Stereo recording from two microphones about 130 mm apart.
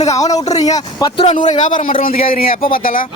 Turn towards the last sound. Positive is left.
turn(degrees=90)